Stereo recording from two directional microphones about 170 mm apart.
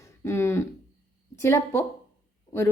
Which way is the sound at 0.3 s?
15° left (ahead or behind).